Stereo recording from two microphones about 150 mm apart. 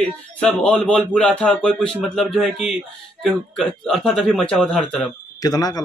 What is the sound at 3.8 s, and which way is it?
Speech, 5° left (ahead or behind).